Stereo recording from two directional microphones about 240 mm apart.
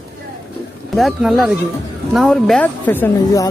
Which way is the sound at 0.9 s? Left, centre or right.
Centre.